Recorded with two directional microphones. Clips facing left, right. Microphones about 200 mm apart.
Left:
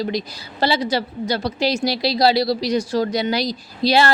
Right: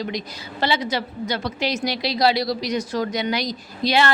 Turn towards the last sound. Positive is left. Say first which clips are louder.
# left 3 dB
turn(degrees=35)  # may be behind; listen again after turning